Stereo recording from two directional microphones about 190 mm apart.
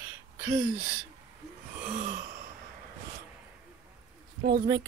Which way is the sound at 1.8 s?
45° right (ahead or behind).